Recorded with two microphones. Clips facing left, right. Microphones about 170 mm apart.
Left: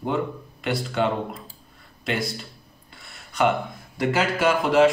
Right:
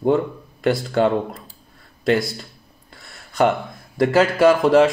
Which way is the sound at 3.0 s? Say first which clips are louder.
Right 4 dB; 40° right (ahead or behind).